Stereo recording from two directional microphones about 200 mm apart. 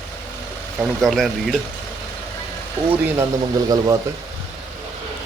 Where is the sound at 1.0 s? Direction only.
Centre (ahead or behind).